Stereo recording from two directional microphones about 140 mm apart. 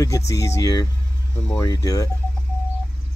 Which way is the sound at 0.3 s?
20° left (ahead or behind).